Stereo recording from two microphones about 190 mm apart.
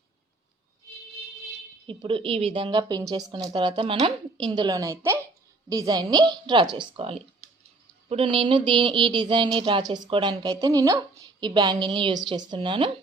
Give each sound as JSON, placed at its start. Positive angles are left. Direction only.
{"t": 1.9, "sound": "a woman's voice", "side_deg": -25}